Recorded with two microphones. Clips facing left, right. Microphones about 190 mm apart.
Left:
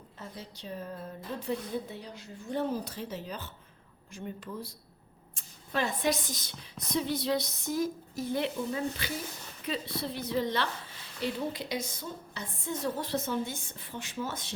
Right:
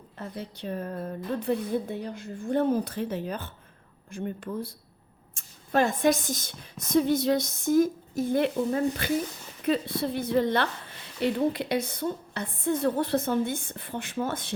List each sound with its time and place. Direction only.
0.2 s a woman's voice: 60° right (ahead or behind)